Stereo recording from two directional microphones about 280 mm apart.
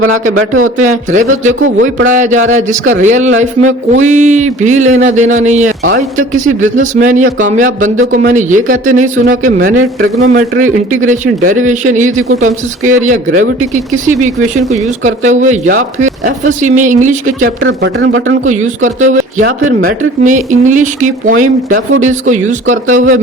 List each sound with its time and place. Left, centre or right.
0.3 s speech: right
0.9 s a man's voice: right
1.5 s speech: right
2.0 s a man's voice: right
15.3 s a man's voice: right
17.6 s speech: right
18.8 s a man's voice: right
22.9 s speech: right